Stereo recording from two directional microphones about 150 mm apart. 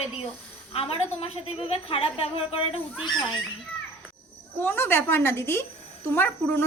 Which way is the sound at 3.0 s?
5° left (ahead or behind).